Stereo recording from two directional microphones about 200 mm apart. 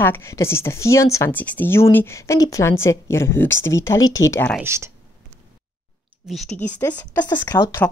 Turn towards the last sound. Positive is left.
turn(degrees=20)  # may be behind; listen again after turning